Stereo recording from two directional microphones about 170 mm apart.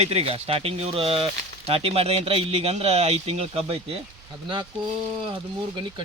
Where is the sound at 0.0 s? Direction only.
35° right (ahead or behind).